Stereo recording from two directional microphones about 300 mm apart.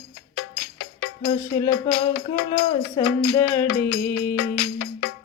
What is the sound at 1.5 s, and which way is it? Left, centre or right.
Music, centre.